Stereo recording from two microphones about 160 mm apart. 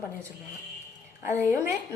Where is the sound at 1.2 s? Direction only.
15° right (ahead or behind).